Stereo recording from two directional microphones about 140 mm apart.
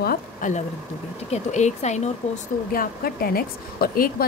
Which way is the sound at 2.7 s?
90° left.